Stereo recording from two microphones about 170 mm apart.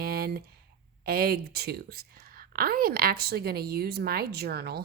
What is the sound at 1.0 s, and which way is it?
A woman's voice, 65° right (ahead or behind).